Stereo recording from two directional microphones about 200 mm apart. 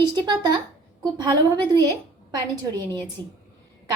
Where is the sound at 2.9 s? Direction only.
20° right (ahead or behind).